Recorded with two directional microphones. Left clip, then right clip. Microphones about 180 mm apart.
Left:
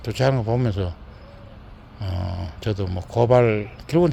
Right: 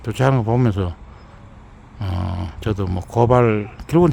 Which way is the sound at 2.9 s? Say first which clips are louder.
Right 1 dB; 50° right (ahead or behind).